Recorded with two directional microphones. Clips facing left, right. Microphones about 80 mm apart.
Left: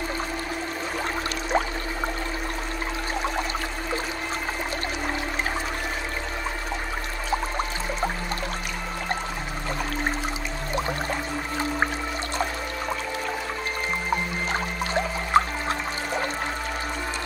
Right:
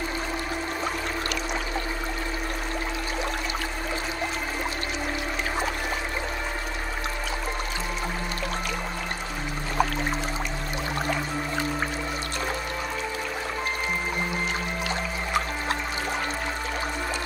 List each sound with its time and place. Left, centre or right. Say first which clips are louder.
15.3 s music: left 8 dB; left